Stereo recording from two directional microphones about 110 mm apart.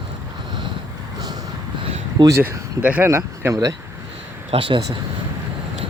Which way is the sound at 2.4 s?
15° right (ahead or behind).